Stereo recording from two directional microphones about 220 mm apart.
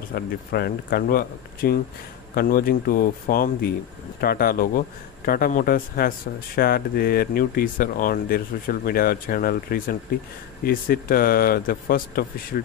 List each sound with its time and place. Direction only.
0.1 s a man's voice: 45° left (ahead or behind)